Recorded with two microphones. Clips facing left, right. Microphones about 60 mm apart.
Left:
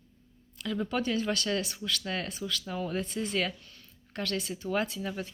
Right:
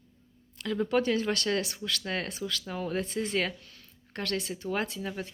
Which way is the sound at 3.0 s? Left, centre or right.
Right.